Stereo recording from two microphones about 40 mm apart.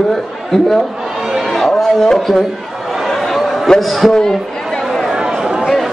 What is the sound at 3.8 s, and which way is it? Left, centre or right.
Speech, centre.